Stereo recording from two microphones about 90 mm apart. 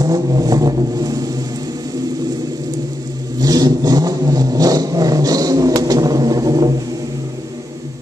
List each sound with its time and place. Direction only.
0.0 s vehicle: 45° right (ahead or behind)
3.3 s vehicle: 45° right (ahead or behind)